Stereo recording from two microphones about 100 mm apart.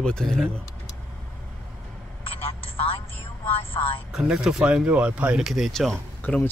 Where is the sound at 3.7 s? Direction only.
70° left (ahead or behind).